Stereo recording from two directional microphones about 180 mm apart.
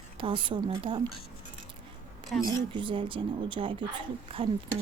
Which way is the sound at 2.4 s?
25° right (ahead or behind).